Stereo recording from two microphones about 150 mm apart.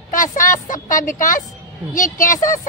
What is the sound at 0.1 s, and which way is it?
A woman's voice, 60° left (ahead or behind).